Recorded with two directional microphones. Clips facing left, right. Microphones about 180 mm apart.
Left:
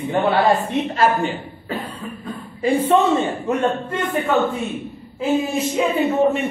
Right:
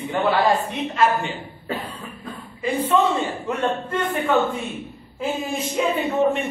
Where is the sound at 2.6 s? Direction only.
50° left (ahead or behind).